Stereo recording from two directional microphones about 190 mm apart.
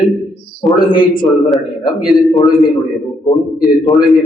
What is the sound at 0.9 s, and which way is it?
Speech, 25° left (ahead or behind).